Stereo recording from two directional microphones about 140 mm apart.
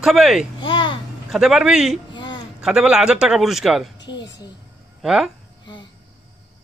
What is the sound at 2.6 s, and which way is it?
A man's voice, 5° right (ahead or behind).